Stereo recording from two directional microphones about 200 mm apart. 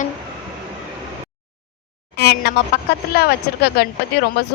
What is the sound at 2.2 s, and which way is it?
A woman's voice, 55° left (ahead or behind).